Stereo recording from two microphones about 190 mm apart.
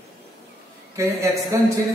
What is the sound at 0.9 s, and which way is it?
Speech, 15° right (ahead or behind).